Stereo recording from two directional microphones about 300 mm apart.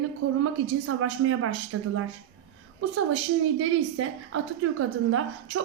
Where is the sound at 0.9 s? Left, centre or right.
Right.